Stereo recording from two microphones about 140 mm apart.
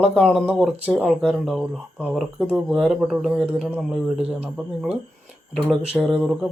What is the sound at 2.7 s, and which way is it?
Speech, centre (ahead or behind).